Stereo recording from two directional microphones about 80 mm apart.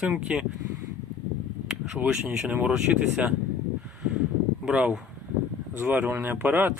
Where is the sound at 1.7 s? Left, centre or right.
Centre.